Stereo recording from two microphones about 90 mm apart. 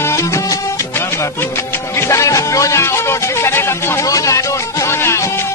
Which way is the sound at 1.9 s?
30° left (ahead or behind).